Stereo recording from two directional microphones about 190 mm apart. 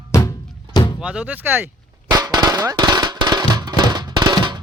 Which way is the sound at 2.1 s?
20° right (ahead or behind).